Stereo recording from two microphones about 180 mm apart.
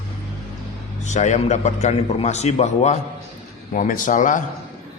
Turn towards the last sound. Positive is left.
turn(degrees=45)  # may be behind; listen again after turning